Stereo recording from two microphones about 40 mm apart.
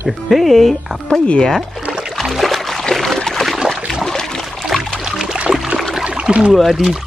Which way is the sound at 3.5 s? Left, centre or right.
Centre.